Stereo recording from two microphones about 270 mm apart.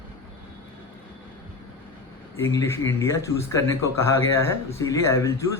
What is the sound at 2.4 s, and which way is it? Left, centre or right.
Speech, centre.